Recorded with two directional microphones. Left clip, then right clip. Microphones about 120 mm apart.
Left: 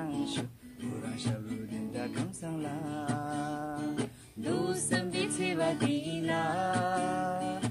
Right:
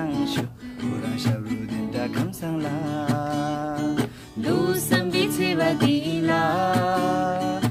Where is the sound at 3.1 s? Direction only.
10° left (ahead or behind).